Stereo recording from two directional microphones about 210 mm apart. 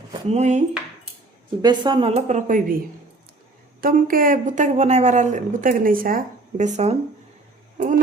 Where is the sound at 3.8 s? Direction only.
40° right (ahead or behind).